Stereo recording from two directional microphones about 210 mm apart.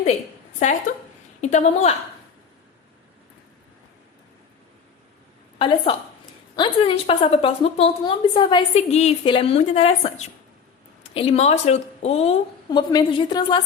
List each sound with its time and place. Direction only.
0.6 s a woman's voice: 35° left (ahead or behind)
5.5 s a woman's voice: 25° left (ahead or behind)
12.9 s a woman's voice: 20° left (ahead or behind)